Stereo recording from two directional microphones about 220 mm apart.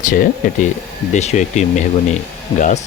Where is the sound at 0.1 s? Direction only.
40° left (ahead or behind).